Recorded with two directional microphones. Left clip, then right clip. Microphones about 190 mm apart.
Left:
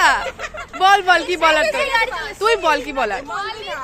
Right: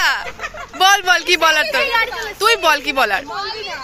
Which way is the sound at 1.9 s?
60° left (ahead or behind).